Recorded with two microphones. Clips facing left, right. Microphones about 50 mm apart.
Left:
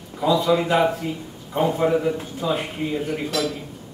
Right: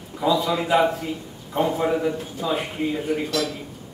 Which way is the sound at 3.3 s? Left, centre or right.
Centre.